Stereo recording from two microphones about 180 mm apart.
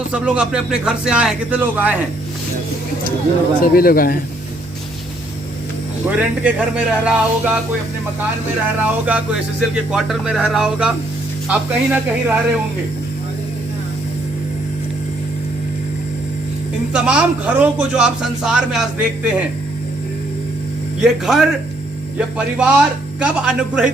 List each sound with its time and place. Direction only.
0.1 s a man's voice: 5° right (ahead or behind)
3.6 s speech: 55° left (ahead or behind)
6.1 s a man's voice: 5° right (ahead or behind)
8.8 s a man's voice: 10° right (ahead or behind)
16.9 s a man's voice: 5° right (ahead or behind)
21.0 s a man's voice: centre (ahead or behind)